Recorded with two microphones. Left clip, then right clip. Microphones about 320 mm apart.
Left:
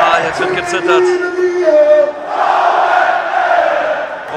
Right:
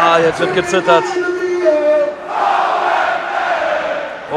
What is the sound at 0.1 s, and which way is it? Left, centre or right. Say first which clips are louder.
Speech: right 1 dB; centre.